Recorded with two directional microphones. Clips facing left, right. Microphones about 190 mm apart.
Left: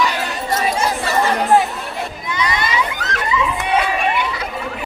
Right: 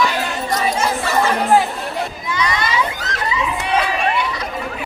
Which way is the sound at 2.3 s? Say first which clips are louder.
Even; 20° left (ahead or behind).